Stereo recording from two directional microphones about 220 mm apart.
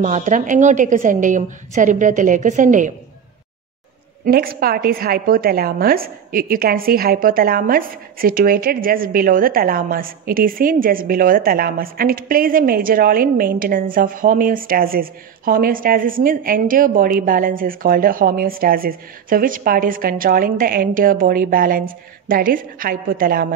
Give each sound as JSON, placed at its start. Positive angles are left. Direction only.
{"t": 0.0, "sound": "a woman's voice", "side_deg": -35}
{"t": 4.3, "sound": "a woman's voice", "side_deg": -40}